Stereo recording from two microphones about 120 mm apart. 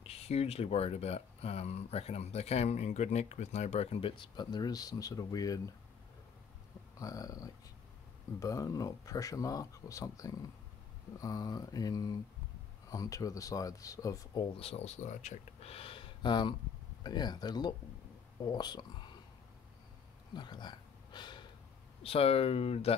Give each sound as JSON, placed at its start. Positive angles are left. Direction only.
{"t": 0.0, "sound": "speech", "side_deg": 55}
{"t": 4.1, "sound": "speech", "side_deg": 40}
{"t": 7.0, "sound": "speech", "side_deg": 30}
{"t": 14.4, "sound": "speech", "side_deg": 50}
{"t": 15.7, "sound": "a sound", "side_deg": 50}
{"t": 17.0, "sound": "speech", "side_deg": 35}
{"t": 20.3, "sound": "a sound", "side_deg": 40}
{"t": 22.0, "sound": "speech", "side_deg": 55}